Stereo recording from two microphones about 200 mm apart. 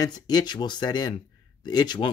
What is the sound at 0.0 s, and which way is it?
Speech, 20° left (ahead or behind).